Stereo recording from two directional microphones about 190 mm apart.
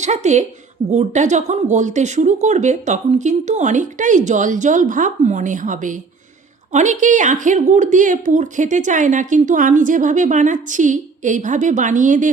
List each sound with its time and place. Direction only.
0.0 s a woman's voice: 35° right (ahead or behind)